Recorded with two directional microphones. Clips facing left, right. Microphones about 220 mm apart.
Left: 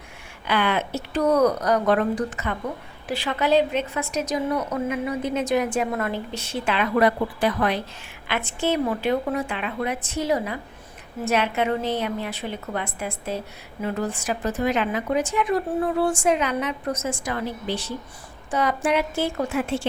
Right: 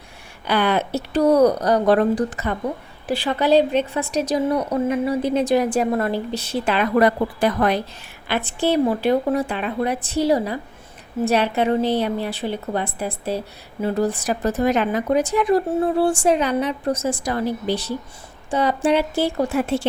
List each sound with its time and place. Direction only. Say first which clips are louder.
0.4 s a woman's voice: right 4 dB; 35° right (ahead or behind)